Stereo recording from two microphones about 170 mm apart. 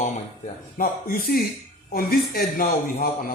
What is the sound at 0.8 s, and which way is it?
A man's voice, 60° left (ahead or behind).